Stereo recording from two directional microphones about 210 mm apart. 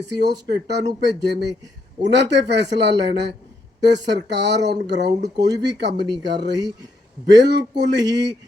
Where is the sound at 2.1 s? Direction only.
55° right (ahead or behind).